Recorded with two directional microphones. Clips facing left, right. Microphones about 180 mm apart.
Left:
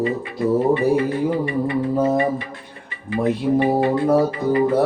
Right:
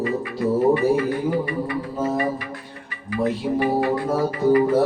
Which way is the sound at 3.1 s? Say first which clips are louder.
Left 3 dB; 25° left (ahead or behind).